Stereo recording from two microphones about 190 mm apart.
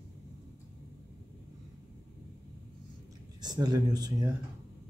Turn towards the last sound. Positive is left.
turn(degrees=-20)  # may be behind; listen again after turning